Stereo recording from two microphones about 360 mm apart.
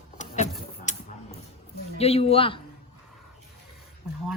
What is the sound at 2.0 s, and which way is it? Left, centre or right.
Speech, centre.